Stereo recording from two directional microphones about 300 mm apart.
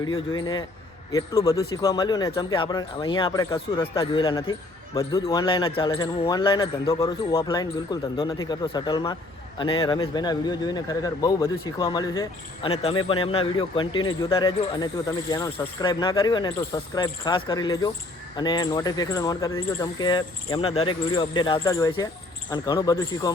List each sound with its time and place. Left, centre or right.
0.3 s a man's voice: centre